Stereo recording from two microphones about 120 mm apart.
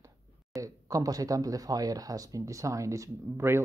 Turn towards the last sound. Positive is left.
turn(degrees=-20)  # may be behind; listen again after turning